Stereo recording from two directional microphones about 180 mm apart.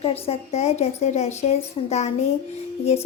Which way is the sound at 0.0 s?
35° left (ahead or behind).